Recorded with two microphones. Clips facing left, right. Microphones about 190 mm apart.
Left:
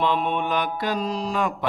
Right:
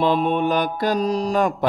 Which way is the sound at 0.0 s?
35° right (ahead or behind).